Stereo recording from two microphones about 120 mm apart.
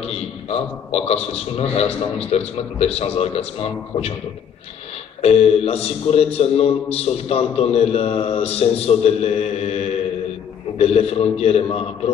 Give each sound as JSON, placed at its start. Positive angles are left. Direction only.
{"t": 0.0, "sound": "a man's voice", "side_deg": 55}
{"t": 5.2, "sound": "a man's voice", "side_deg": 60}